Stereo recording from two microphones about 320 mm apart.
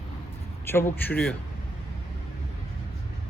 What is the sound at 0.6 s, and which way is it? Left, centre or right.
Speech, centre.